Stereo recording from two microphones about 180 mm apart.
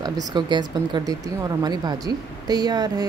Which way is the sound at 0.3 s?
25° right (ahead or behind).